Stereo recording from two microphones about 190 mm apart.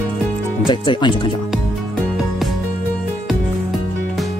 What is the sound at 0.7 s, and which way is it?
Speech, 25° left (ahead or behind).